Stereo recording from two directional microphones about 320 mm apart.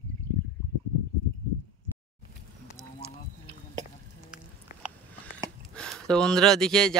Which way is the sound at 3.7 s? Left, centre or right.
Centre.